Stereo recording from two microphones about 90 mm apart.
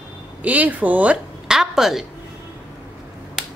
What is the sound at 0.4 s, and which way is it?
Speech, 15° right (ahead or behind).